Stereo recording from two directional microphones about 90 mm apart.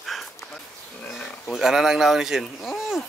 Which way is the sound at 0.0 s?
Centre (ahead or behind).